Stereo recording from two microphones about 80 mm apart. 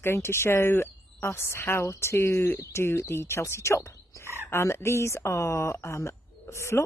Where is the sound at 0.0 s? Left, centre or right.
Left.